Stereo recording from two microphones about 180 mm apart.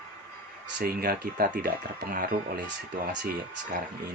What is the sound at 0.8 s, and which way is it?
Speech, 55° right (ahead or behind).